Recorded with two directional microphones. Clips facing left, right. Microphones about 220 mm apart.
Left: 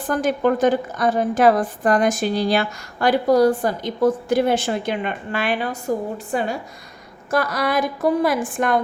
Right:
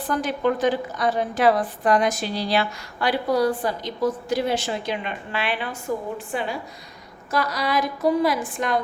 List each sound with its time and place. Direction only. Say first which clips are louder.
0.0 s a woman's voice: left 4 dB; 50° left (ahead or behind)